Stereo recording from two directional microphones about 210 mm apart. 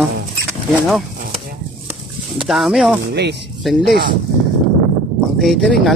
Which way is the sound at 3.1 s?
50° right (ahead or behind).